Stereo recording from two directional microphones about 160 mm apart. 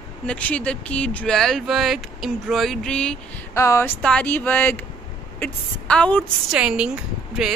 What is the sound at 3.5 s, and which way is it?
Speech, 15° left (ahead or behind).